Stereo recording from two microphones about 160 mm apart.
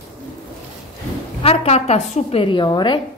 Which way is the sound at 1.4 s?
40° left (ahead or behind).